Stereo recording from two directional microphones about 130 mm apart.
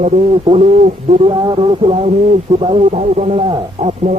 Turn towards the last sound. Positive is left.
turn(degrees=-40)  # may be behind; listen again after turning